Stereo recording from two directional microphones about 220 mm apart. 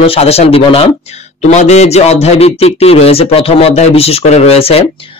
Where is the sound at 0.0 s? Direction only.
25° left (ahead or behind).